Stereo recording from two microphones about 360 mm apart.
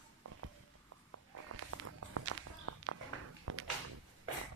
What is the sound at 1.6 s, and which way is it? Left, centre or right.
Walk, right.